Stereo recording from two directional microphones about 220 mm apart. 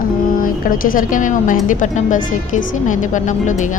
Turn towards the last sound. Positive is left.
turn(degrees=35)  # may be behind; listen again after turning